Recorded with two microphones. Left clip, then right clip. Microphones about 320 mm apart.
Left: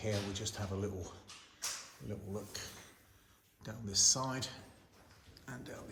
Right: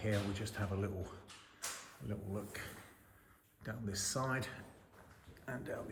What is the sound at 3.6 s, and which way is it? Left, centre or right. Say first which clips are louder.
Speech: left 10 dB; centre.